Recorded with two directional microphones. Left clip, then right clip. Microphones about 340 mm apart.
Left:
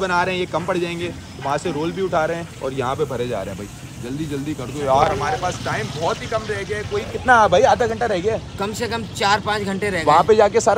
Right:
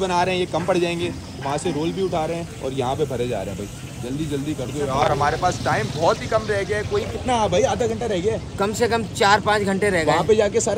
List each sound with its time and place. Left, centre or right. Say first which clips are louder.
0.0 s speech: left 1 dB; centre
5.1 s speech: right 2 dB; centre
7.4 s speech: left 5 dB; centre
8.5 s speech: right 4 dB; centre
10.2 s speech: left 4 dB; centre